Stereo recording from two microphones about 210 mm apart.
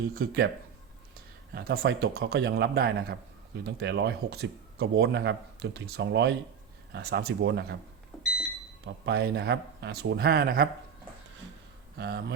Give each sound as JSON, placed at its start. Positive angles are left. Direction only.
{"t": 1.5, "sound": "speech", "side_deg": -50}
{"t": 8.1, "sound": "smoke detector", "side_deg": 0}
{"t": 9.0, "sound": "speech", "side_deg": -50}
{"t": 11.9, "sound": "speech", "side_deg": -50}